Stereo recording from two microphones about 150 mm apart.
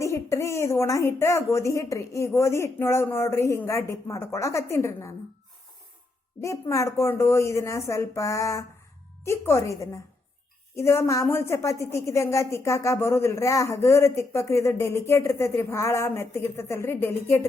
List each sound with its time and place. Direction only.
0.0 s a woman's voice: 20° left (ahead or behind)
6.4 s a woman's voice: 20° left (ahead or behind)